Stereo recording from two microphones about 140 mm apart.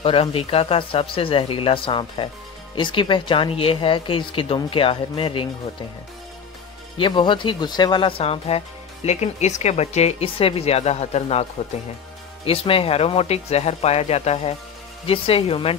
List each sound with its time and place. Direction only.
0.0 s speech: 40° left (ahead or behind)
7.0 s speech: 35° left (ahead or behind)
12.4 s speech: 40° left (ahead or behind)